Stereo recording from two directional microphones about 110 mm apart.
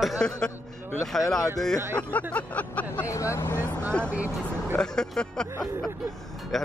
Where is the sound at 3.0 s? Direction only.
25° left (ahead or behind).